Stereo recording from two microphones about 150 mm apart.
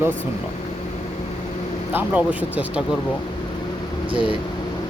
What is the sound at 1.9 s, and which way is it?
Speech, 10° right (ahead or behind).